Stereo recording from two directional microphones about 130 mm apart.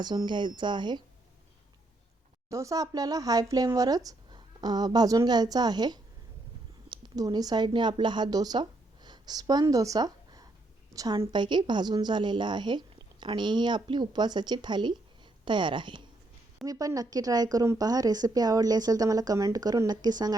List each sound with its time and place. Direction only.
0.0 s a woman's voice: 35° right (ahead or behind)
2.5 s a woman's voice: 25° right (ahead or behind)
9.0 s a sound: 30° right (ahead or behind)
10.9 s a woman's voice: 30° right (ahead or behind)
16.6 s a woman's voice: 25° right (ahead or behind)